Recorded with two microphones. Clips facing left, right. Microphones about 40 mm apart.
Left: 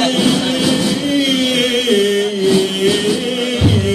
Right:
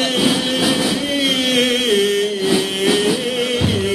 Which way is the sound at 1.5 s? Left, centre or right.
Centre.